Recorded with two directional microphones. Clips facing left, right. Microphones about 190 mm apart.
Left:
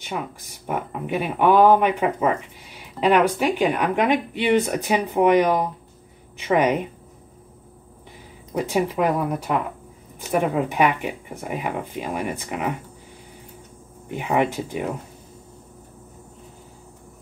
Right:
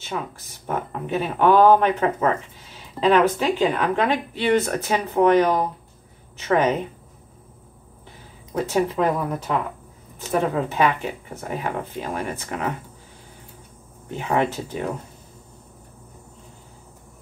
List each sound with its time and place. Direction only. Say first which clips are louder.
0.0 s speech: even; 15° left (ahead or behind)
8.5 s speech: even; 10° left (ahead or behind)
14.0 s speech: left 1 dB; 10° left (ahead or behind)